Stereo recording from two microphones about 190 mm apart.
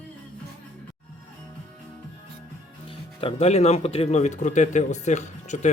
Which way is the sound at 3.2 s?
30° left (ahead or behind).